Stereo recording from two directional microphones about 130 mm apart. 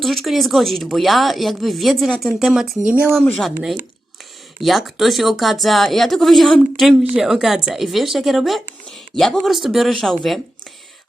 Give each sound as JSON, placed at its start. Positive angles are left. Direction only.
{"t": 0.0, "sound": "speech", "side_deg": 0}
{"t": 4.6, "sound": "speech", "side_deg": 0}